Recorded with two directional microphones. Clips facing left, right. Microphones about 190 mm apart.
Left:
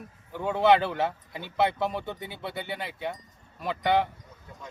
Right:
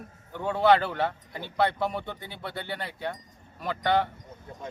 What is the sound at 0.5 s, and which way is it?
Speech, 20° left (ahead or behind).